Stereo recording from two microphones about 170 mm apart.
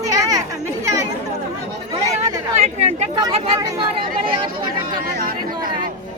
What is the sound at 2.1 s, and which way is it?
Chatter, 40° right (ahead or behind).